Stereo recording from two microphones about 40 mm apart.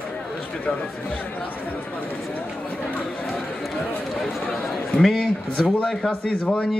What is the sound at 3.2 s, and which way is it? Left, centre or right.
Run, centre.